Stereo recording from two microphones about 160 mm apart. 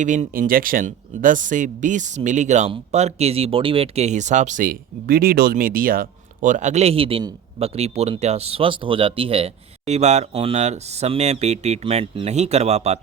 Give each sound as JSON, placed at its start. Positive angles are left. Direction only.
{"t": 0.0, "sound": "speech", "side_deg": -50}